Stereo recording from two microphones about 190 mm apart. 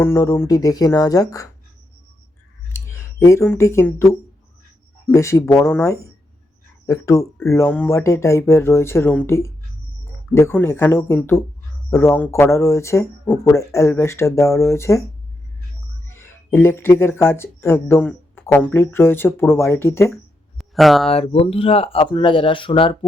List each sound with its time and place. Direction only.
0.0 s speech: 15° left (ahead or behind)
2.7 s speech: 15° left (ahead or behind)
16.1 s speech: 10° left (ahead or behind)
20.6 s a sound: centre (ahead or behind)
21.1 s speech: 30° left (ahead or behind)